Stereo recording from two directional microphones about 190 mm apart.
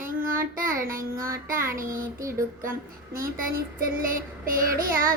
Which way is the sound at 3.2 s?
50° right (ahead or behind).